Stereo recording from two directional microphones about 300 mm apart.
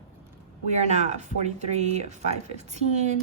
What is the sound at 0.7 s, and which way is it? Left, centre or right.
A woman's voice, right.